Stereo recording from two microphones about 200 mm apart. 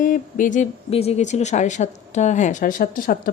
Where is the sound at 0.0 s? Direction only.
40° left (ahead or behind).